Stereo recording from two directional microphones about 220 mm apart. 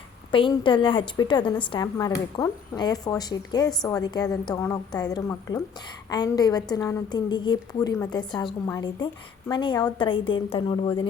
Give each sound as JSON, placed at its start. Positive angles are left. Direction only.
{"t": 0.3, "sound": "a woman's voice", "side_deg": 25}